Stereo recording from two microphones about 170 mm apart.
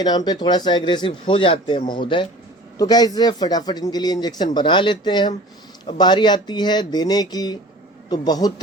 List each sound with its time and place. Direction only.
0.0 s speech: 25° left (ahead or behind)